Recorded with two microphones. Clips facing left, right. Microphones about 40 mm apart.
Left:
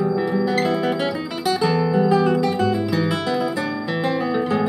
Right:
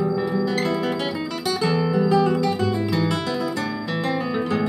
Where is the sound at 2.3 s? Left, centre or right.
Centre.